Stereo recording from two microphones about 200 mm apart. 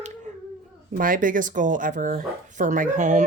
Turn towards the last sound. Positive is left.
turn(degrees=-40)  # may be behind; listen again after turning